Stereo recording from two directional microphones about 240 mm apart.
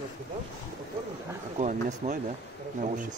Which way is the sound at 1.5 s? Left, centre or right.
Right.